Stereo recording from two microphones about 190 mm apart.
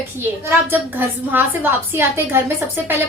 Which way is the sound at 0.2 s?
10° right (ahead or behind).